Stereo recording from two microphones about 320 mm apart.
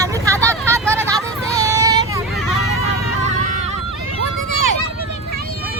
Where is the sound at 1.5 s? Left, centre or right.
Centre.